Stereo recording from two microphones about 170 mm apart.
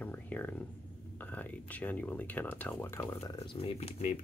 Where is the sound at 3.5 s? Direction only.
35° left (ahead or behind).